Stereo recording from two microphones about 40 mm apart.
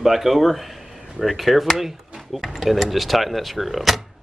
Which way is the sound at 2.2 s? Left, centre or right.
Centre.